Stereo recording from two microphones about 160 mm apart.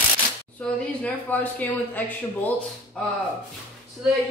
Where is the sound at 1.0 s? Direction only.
10° left (ahead or behind).